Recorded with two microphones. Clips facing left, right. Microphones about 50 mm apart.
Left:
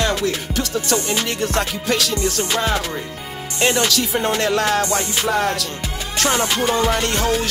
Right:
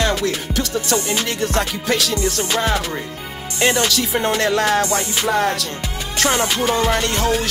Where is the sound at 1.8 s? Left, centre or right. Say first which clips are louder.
Right 1 dB; centre.